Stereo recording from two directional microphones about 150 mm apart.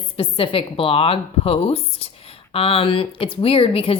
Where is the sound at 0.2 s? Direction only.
40° left (ahead or behind).